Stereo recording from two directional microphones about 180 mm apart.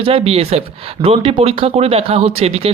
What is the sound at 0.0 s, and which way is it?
Speech, 30° right (ahead or behind).